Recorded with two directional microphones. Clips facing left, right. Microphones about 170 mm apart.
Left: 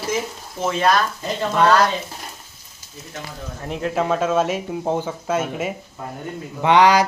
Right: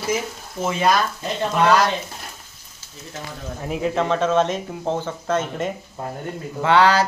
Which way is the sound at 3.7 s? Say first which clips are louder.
Even; centre (ahead or behind).